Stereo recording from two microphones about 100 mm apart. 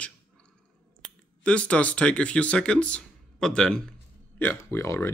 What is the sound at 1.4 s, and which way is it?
Speech, 10° left (ahead or behind).